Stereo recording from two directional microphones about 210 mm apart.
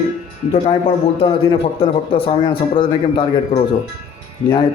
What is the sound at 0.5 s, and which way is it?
A man's voice, 25° left (ahead or behind).